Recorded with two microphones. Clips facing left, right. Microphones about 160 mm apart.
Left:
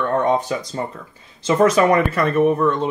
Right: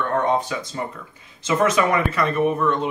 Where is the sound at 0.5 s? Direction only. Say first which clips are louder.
Left 3 dB; 35° left (ahead or behind).